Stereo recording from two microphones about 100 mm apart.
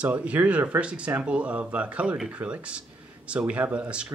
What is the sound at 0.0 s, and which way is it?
Speech, 15° right (ahead or behind).